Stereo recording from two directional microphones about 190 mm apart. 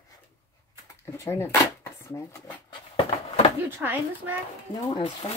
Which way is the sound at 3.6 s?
10° right (ahead or behind).